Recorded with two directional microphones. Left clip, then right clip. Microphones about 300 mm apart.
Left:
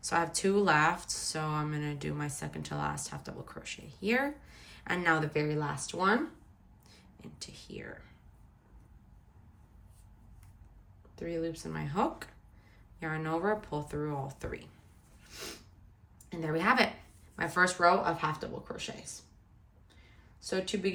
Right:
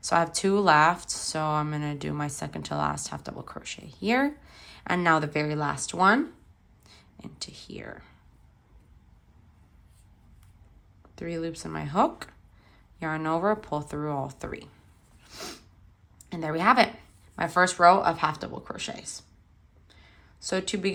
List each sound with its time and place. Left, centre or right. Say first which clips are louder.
0.0 s speech: right 6 dB; centre
11.1 s speech: right 3 dB; centre
15.2 s snort: right 4 dB; centre
16.3 s speech: right 6 dB; centre
20.5 s speech: right 4 dB; centre